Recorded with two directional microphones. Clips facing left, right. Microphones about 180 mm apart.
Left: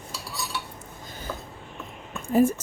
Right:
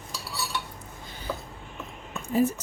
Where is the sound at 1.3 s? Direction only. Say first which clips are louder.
Right 2 dB; 5° right (ahead or behind).